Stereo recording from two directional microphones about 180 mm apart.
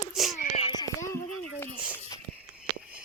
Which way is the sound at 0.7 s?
20° left (ahead or behind).